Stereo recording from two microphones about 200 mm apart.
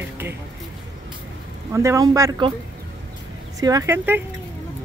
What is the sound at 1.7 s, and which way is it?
Speech, 15° right (ahead or behind).